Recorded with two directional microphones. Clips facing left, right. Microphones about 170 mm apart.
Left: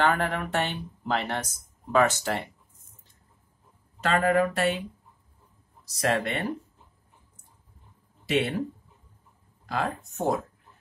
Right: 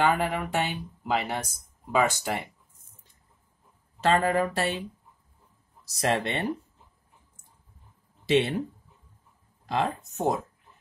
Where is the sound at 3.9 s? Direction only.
30° right (ahead or behind).